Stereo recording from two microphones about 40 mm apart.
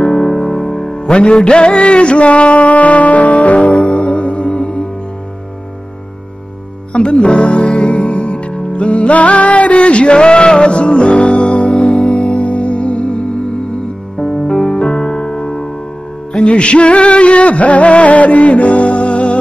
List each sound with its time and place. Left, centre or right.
0.0 s music: centre
1.4 s music: left
6.9 s music: left
11.3 s music: centre